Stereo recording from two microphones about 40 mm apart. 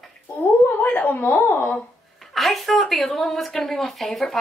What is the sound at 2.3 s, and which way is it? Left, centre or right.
A woman's voice, centre.